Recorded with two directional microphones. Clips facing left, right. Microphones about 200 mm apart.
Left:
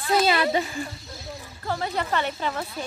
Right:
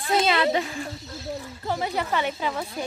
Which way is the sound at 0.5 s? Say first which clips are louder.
Left 1 dB; centre (ahead or behind).